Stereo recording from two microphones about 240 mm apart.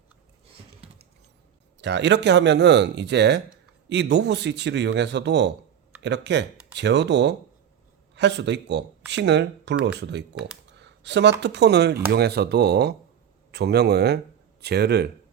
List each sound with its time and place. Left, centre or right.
0.8 s patter: right
1.8 s speech: right